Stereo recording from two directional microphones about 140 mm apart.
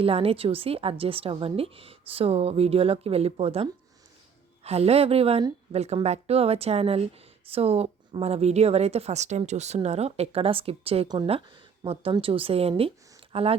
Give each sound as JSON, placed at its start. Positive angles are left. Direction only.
{"t": 0.0, "sound": "a woman's voice", "side_deg": -45}